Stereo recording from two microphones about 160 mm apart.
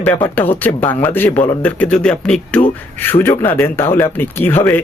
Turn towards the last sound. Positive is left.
turn(degrees=15)  # may be behind; listen again after turning